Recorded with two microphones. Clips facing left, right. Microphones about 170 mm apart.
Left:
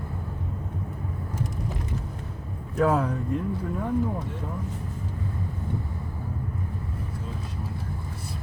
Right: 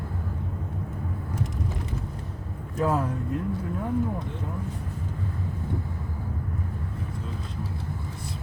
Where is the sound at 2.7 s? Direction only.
Centre (ahead or behind).